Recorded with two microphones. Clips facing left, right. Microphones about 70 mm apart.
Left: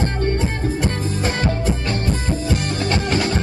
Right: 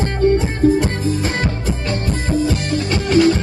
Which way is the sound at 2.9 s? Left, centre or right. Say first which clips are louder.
Right 8 dB; left.